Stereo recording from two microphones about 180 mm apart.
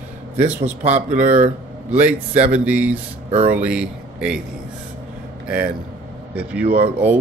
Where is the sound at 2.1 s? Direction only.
30° right (ahead or behind).